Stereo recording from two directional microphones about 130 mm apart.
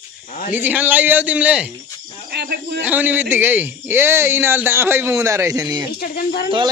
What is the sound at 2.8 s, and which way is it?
A man's voice, 15° right (ahead or behind).